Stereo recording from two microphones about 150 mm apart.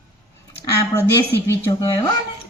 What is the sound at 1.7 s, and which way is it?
Speech, 25° left (ahead or behind).